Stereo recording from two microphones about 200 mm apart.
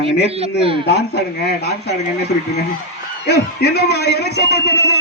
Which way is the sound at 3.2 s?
55° left (ahead or behind).